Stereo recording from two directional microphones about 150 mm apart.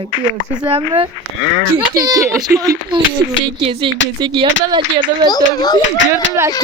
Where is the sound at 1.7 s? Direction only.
25° right (ahead or behind).